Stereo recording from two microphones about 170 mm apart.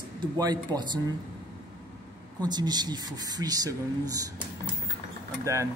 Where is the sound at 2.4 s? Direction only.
25° right (ahead or behind).